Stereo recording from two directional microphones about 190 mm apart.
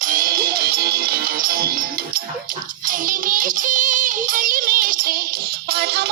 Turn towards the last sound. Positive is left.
turn(degrees=-60)  # may be behind; listen again after turning